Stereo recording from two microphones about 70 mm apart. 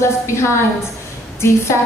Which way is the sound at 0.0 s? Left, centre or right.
Left.